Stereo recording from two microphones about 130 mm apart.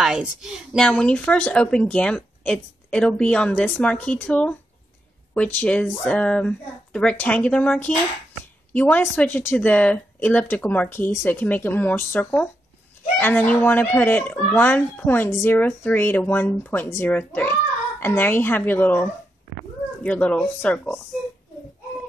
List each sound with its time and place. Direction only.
0.0 s a woman's voice: 5° right (ahead or behind)
0.7 s speech: 5° left (ahead or behind)